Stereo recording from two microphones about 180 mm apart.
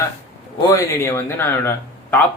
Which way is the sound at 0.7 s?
15° left (ahead or behind).